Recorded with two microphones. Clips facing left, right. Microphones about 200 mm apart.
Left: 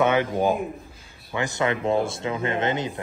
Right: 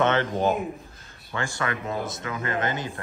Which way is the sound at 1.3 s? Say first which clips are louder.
Left 5 dB; 20° left (ahead or behind).